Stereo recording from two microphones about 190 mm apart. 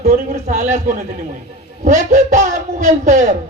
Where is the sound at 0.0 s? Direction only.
35° right (ahead or behind).